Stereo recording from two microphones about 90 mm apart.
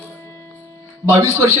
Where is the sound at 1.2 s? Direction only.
35° right (ahead or behind).